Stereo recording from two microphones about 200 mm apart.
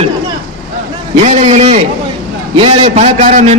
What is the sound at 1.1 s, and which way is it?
A man's voice, 35° right (ahead or behind).